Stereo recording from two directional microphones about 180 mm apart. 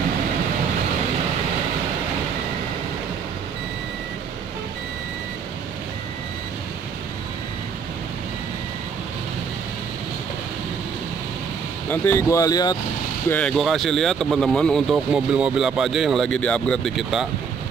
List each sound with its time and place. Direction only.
11.9 s speech: 15° left (ahead or behind)
13.3 s speech: 5° left (ahead or behind)